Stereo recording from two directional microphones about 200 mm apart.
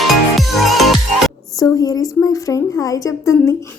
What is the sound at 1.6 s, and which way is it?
A woman's voice, 20° left (ahead or behind).